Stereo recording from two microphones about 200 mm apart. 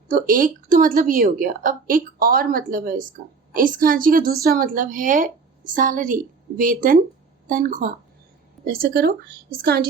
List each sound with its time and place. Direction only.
0.1 s a woman's voice: 45° right (ahead or behind)